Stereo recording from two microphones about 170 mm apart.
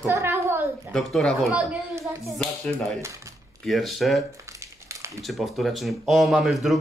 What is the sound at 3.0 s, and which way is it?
Speech, 15° right (ahead or behind).